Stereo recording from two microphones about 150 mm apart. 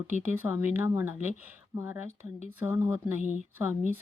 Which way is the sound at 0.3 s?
15° right (ahead or behind).